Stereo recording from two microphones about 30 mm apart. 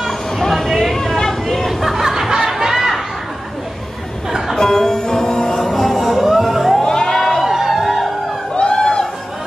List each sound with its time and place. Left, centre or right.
0.4 s a sound: centre
0.9 s a sound: centre
1.7 s music: centre
4.6 s music: centre
5.6 s music: centre
6.8 s music: left
7.4 s music: centre
8.5 s chatter: left